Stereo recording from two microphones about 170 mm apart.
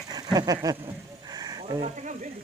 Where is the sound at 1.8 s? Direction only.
45° right (ahead or behind).